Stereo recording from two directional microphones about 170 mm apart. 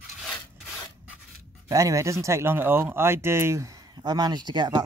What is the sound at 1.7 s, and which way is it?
Speech, 20° right (ahead or behind).